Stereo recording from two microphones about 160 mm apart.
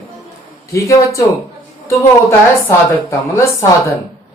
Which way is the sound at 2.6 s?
15° left (ahead or behind).